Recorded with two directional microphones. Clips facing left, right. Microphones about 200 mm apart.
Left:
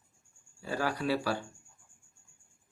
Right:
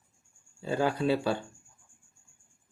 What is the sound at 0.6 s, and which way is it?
Speech, 25° right (ahead or behind).